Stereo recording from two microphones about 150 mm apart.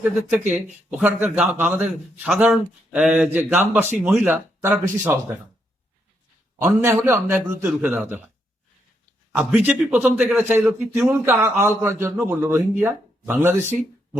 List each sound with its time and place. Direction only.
0.0 s a man's voice: 10° right (ahead or behind)
6.6 s a man's voice: 20° right (ahead or behind)
9.3 s a man's voice: 10° right (ahead or behind)